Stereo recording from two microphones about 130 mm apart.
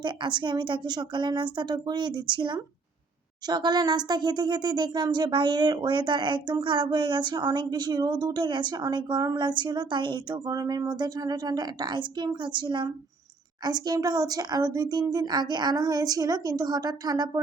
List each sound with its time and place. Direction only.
0.0 s speech: 35° right (ahead or behind)